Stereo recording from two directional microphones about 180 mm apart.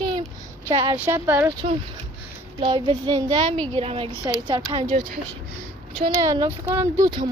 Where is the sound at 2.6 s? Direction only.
30° right (ahead or behind).